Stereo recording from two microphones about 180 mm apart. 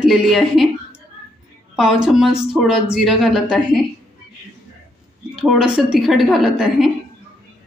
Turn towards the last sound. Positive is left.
turn(degrees=0)  # may be behind; listen again after turning